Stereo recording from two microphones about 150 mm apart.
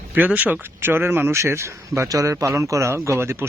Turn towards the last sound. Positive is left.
turn(degrees=-15)  # may be behind; listen again after turning